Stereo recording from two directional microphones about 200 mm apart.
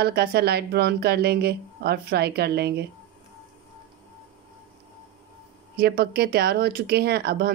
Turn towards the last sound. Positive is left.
turn(degrees=-55)  # may be behind; listen again after turning